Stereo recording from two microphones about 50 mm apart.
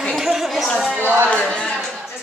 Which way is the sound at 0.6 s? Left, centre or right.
Centre.